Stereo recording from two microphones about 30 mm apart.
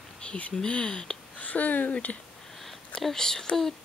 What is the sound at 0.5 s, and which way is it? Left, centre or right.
Speech, left.